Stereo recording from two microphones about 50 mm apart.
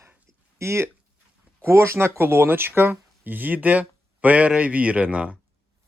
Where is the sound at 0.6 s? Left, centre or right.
Right.